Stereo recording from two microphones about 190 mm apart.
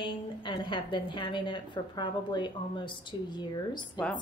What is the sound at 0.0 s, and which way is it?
A woman's voice, 25° left (ahead or behind).